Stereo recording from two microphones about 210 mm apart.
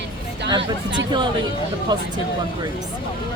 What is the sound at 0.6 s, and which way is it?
Speech, 55° right (ahead or behind).